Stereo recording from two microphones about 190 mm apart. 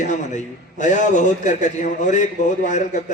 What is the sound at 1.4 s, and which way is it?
A man's voice, 40° left (ahead or behind).